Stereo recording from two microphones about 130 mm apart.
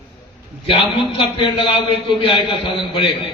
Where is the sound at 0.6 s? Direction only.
40° left (ahead or behind).